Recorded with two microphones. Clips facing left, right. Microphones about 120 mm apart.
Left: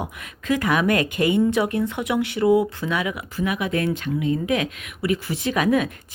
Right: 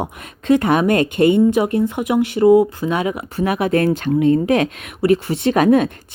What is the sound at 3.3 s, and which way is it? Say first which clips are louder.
A woman's voice: right 7 dB; 50° right (ahead or behind).